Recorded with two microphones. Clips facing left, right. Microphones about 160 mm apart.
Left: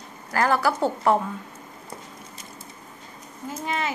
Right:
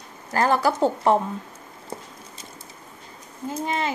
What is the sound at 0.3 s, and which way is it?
Speech, 20° right (ahead or behind).